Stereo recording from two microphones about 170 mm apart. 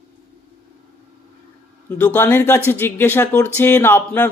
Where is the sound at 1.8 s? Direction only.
10° left (ahead or behind).